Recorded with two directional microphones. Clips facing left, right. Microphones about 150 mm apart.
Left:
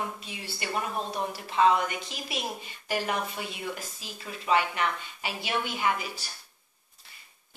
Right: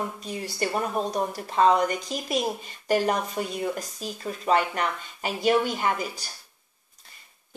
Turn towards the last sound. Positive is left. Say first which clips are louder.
# right 2 dB
turn(degrees=-40)  # may be behind; listen again after turning